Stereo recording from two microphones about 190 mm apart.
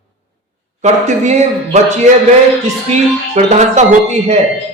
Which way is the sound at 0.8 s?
35° right (ahead or behind).